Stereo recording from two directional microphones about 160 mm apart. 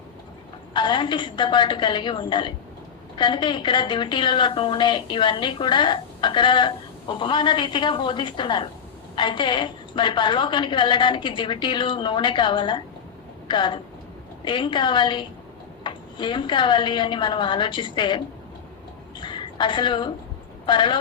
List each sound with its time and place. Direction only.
0.7 s a woman's voice: 30° left (ahead or behind)
19.2 s a sound: 30° left (ahead or behind)
20.7 s a woman's voice: 30° left (ahead or behind)